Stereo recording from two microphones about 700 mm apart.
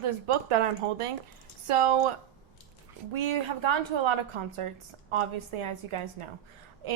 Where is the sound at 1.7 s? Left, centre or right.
Right.